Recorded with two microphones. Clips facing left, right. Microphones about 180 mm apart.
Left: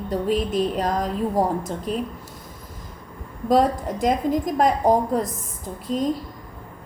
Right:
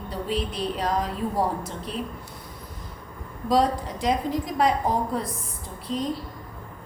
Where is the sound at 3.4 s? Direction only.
50° left (ahead or behind).